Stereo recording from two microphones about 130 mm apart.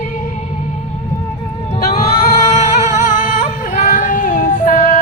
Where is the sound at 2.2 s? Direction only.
60° left (ahead or behind).